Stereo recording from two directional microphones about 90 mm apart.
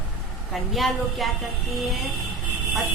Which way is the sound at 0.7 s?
Centre (ahead or behind).